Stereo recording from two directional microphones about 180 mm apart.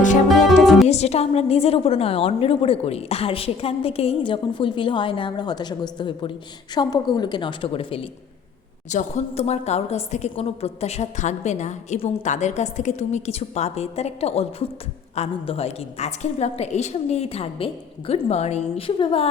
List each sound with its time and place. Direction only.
0.4 s music: centre (ahead or behind)
0.9 s a woman's voice: 35° left (ahead or behind)
8.9 s a woman's voice: 40° left (ahead or behind)